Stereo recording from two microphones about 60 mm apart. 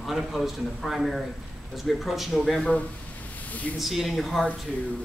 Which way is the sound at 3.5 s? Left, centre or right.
Left.